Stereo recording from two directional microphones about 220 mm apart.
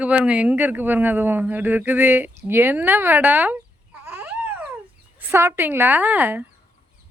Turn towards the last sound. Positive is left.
turn(degrees=-10)  # may be behind; listen again after turning